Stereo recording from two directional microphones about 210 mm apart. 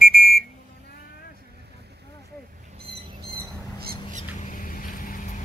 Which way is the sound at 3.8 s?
45° right (ahead or behind).